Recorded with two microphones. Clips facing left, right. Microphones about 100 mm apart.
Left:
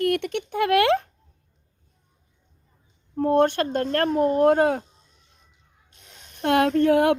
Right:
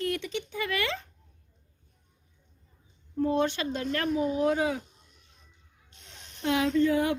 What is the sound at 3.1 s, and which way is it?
Speech, 55° left (ahead or behind).